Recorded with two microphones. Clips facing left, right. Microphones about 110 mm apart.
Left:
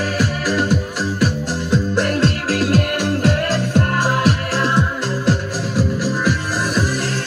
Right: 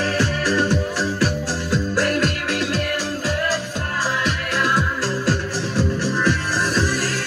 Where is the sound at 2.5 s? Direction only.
45° left (ahead or behind).